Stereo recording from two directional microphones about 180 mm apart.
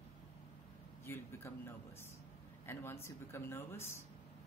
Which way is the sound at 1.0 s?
15° left (ahead or behind).